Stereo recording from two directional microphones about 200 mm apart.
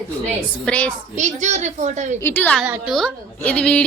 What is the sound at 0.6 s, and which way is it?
Speech, 5° left (ahead or behind).